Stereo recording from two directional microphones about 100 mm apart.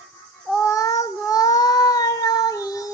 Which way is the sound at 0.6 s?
35° left (ahead or behind).